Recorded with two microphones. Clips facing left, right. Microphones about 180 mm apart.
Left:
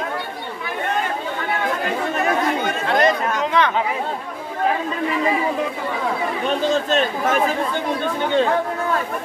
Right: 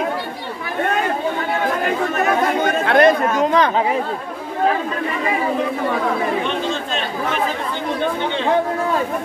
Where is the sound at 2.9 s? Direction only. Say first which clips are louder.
Right 4 dB; 55° right (ahead or behind).